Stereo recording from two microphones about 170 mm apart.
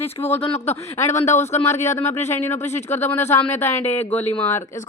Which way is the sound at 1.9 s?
15° left (ahead or behind).